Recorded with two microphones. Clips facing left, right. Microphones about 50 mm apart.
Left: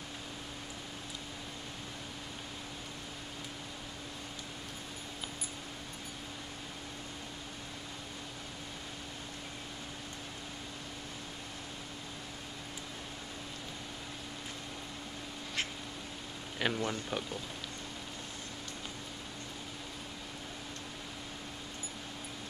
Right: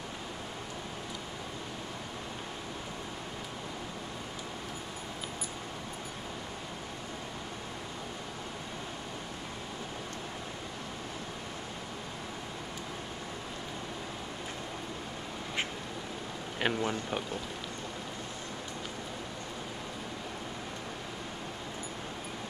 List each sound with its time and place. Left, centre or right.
16.5 s speech: centre